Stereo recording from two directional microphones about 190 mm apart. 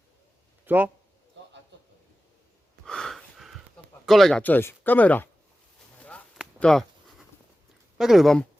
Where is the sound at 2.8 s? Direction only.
5° left (ahead or behind).